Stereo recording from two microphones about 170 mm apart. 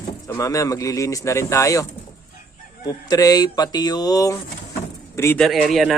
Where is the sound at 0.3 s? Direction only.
20° left (ahead or behind).